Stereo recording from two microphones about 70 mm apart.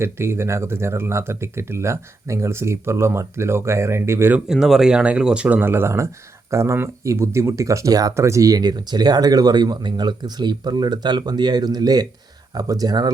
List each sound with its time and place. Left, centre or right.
0.0 s speech: right
4.4 s speech: centre; by 13.1 s right